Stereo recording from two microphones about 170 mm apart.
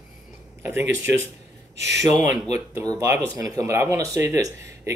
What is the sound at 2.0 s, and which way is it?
Speech, 40° left (ahead or behind).